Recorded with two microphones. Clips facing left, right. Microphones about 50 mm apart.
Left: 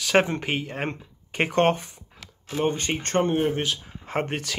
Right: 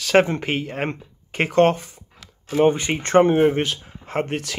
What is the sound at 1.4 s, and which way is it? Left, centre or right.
Speech, centre.